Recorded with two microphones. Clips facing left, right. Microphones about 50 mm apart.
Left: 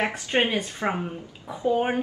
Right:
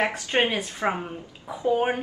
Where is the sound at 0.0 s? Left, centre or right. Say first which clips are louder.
Right 1 dB; centre.